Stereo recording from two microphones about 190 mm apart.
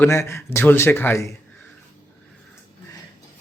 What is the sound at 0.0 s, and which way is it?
A man's voice, 15° left (ahead or behind).